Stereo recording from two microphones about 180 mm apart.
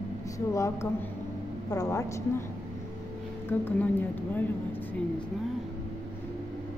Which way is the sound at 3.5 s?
10° left (ahead or behind).